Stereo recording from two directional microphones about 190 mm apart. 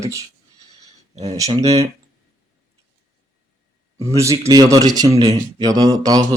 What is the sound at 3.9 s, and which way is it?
A man's voice, 15° right (ahead or behind).